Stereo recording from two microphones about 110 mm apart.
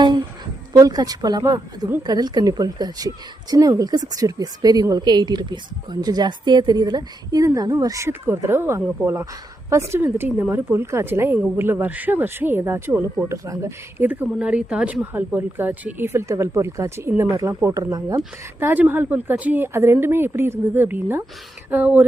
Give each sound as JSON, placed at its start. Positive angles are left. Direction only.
{"t": 0.7, "sound": "a woman's voice", "side_deg": -35}
{"t": 18.6, "sound": "a woman's voice", "side_deg": -15}